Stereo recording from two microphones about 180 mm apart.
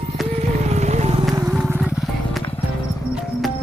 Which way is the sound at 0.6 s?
40° right (ahead or behind).